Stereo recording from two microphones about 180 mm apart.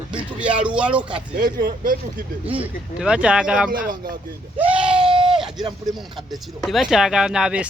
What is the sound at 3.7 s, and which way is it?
Speech, 55° right (ahead or behind).